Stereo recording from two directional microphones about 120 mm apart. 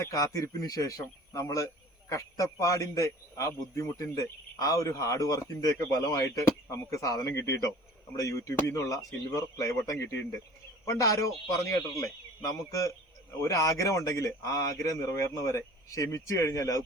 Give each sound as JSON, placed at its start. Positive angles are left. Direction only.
{"t": 0.0, "sound": "a man's voice", "side_deg": 30}
{"t": 12.4, "sound": "a man's voice", "side_deg": 25}